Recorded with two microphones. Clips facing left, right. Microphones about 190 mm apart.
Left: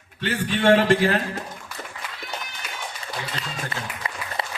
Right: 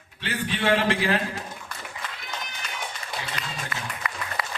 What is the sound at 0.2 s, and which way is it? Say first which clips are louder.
A man's voice: left 4 dB; 45° left (ahead or behind).